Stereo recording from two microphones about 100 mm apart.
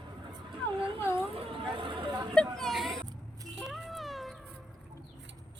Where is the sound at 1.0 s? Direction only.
25° left (ahead or behind).